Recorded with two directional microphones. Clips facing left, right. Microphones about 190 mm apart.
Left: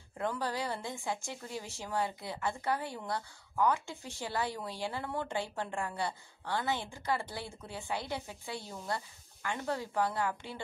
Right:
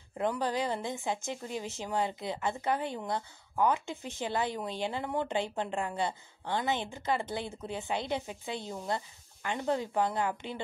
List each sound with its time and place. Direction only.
0.2 s a woman's voice: 20° right (ahead or behind)